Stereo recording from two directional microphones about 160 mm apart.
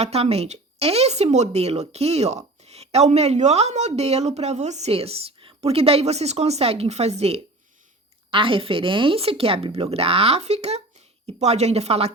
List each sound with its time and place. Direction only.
0.0 s speech: 40° right (ahead or behind)